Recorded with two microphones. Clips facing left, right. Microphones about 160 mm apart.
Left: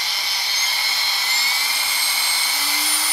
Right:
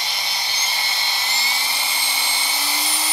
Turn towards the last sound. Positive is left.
turn(degrees=-20)  # may be behind; listen again after turning